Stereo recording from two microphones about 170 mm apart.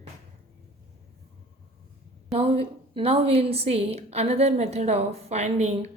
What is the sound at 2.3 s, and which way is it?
A woman's voice, 35° right (ahead or behind).